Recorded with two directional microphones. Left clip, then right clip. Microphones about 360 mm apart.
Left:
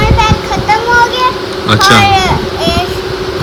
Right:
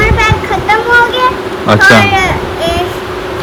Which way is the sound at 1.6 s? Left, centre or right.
Centre.